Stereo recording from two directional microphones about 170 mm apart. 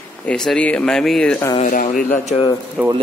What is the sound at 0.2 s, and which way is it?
A man's voice, 5° left (ahead or behind).